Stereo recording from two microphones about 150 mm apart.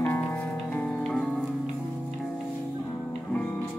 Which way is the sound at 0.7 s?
5° left (ahead or behind).